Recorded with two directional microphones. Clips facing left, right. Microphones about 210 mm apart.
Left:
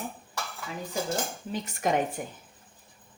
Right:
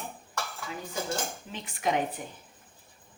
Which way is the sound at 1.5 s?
45° left (ahead or behind).